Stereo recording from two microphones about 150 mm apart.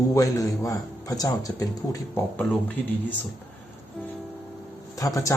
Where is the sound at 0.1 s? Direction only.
20° left (ahead or behind).